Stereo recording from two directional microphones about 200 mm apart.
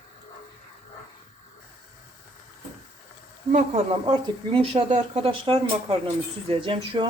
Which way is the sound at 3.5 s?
30° right (ahead or behind).